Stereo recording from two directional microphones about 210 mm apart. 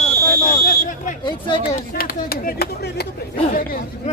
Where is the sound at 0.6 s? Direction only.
40° left (ahead or behind).